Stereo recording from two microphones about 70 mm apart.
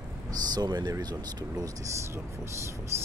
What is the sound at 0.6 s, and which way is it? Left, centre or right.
Speech, right.